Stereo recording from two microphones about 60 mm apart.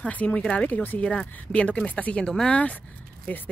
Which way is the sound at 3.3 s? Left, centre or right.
Left.